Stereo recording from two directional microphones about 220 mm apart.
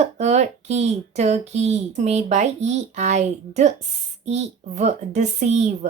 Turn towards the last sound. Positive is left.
turn(degrees=-30)  # may be behind; listen again after turning